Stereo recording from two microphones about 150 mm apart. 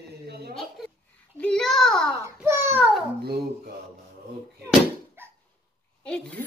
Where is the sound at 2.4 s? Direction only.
15° right (ahead or behind).